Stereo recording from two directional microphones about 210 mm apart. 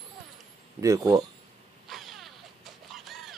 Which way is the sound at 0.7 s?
15° right (ahead or behind).